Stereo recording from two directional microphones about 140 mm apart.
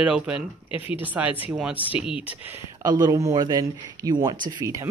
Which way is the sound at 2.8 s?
25° right (ahead or behind).